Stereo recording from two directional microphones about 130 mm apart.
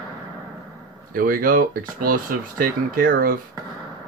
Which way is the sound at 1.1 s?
90° right.